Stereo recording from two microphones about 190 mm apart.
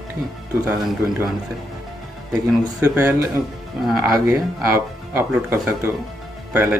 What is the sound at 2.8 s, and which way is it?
Speech, 10° right (ahead or behind).